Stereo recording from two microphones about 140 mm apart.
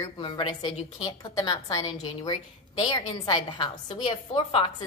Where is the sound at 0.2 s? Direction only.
35° left (ahead or behind).